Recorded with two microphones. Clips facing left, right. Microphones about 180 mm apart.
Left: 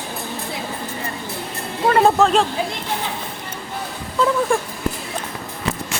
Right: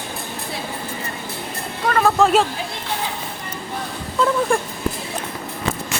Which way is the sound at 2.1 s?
5° right (ahead or behind).